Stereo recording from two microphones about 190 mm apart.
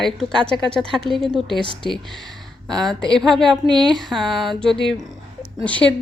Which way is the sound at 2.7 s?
5° left (ahead or behind).